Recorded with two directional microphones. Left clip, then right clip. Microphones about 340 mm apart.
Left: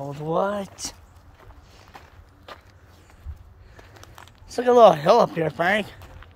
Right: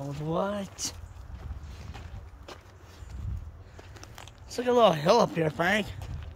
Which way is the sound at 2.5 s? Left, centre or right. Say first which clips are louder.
Left 4 dB; centre.